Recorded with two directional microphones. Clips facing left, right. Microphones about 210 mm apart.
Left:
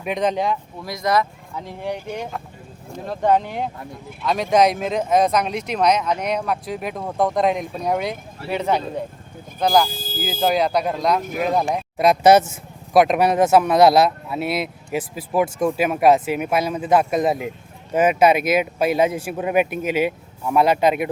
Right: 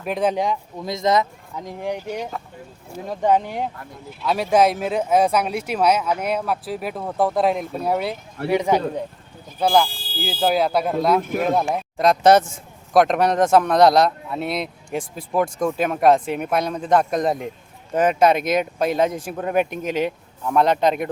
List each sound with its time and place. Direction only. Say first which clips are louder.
0.0 s speech: even; 5° right (ahead or behind)
9.9 s speech: left 2 dB; 45° left (ahead or behind)
10.4 s speech: even; 5° right (ahead or behind)